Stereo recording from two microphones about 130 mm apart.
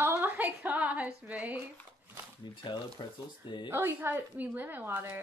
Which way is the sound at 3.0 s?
40° left (ahead or behind).